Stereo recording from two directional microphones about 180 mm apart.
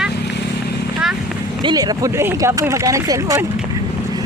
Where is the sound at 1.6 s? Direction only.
25° right (ahead or behind).